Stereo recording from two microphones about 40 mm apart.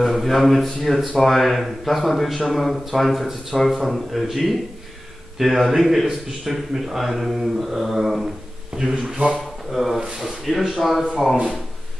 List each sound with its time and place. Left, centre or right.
0.0 s speech: centre
8.9 s speech: centre
9.3 s speech: centre